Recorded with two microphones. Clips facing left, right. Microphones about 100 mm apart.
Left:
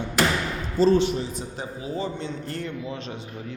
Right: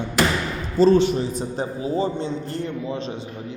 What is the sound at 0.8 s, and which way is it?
A man's voice, 55° right (ahead or behind).